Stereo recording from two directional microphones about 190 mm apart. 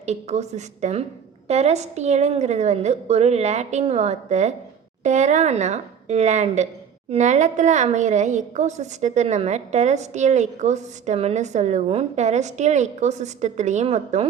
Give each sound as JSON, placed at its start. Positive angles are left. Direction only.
{"t": 0.0, "sound": "a woman's voice", "side_deg": -35}